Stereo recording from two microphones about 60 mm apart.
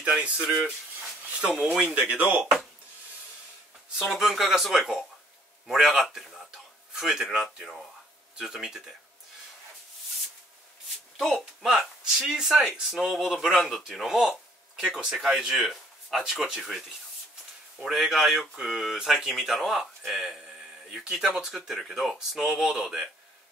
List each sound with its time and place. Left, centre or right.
0.2 s speech: centre
1.8 s speech: right
4.0 s speech: centre
11.1 s speech: centre
17.8 s speech: centre